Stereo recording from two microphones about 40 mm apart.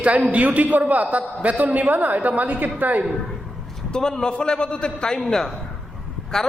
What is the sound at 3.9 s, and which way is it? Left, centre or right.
A man's voice, centre.